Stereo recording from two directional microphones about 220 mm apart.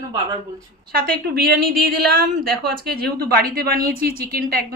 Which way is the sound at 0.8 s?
45° right (ahead or behind).